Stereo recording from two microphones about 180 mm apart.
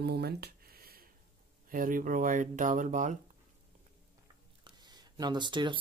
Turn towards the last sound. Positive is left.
turn(degrees=-25)  # may be behind; listen again after turning